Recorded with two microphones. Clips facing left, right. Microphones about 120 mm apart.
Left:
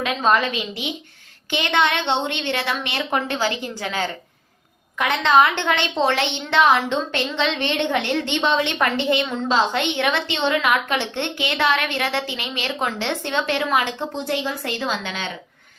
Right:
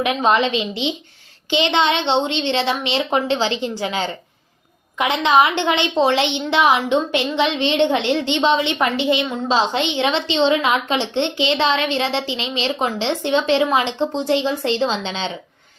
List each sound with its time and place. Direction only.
0.0 s a woman's voice: 15° right (ahead or behind)